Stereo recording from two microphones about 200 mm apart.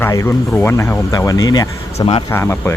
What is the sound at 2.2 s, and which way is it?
Speech, 10° left (ahead or behind).